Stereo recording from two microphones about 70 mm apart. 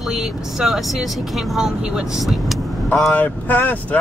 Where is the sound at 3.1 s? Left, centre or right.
Left.